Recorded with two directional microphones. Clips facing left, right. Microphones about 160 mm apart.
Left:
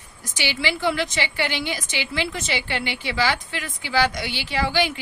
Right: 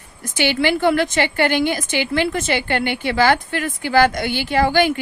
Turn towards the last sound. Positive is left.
turn(degrees=-50)  # may be behind; listen again after turning